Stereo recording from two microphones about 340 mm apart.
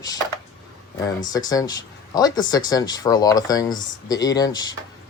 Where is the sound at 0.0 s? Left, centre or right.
Centre.